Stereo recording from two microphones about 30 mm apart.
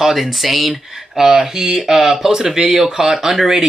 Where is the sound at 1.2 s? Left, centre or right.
Centre.